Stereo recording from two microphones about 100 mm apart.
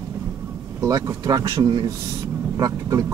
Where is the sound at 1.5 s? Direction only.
50° right (ahead or behind).